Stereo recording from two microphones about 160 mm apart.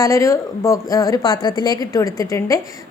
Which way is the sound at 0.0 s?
20° left (ahead or behind).